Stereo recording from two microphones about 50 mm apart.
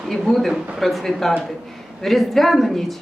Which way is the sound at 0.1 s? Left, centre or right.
Centre.